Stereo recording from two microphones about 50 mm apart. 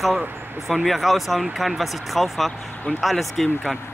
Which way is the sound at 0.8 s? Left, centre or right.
Centre.